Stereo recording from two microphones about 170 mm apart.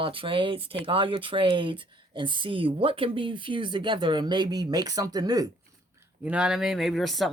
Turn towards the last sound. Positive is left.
turn(degrees=0)  # may be behind; listen again after turning